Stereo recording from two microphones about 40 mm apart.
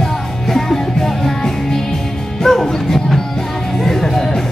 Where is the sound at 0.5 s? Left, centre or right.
Centre.